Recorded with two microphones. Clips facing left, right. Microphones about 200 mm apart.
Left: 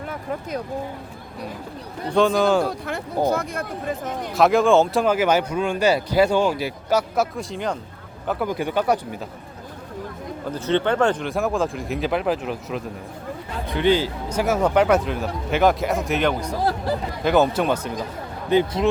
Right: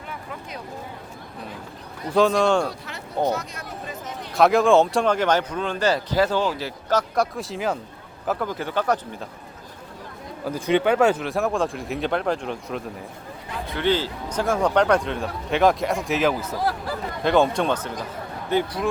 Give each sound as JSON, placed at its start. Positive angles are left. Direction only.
{"t": 0.1, "sound": "a sound", "side_deg": 45}
{"t": 2.1, "sound": "speech", "side_deg": 0}
{"t": 3.3, "sound": "speech", "side_deg": 55}
{"t": 4.4, "sound": "speech", "side_deg": 0}
{"t": 7.3, "sound": "speech", "side_deg": -5}
{"t": 8.4, "sound": "speech", "side_deg": 15}
{"t": 10.5, "sound": "speech", "side_deg": -10}
{"t": 13.7, "sound": "speech", "side_deg": 15}
{"t": 16.6, "sound": "speech", "side_deg": 25}
{"t": 17.2, "sound": "speech", "side_deg": 5}
{"t": 18.5, "sound": "speech", "side_deg": 25}